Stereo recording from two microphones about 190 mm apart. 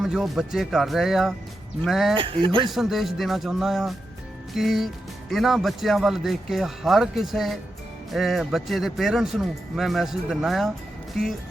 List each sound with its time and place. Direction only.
0.0 s speech: centre (ahead or behind)
2.1 s speech: 25° right (ahead or behind)
2.6 s speech: centre (ahead or behind)